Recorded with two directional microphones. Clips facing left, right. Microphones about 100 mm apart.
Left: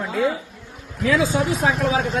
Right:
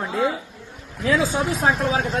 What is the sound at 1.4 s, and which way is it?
Speech, centre (ahead or behind).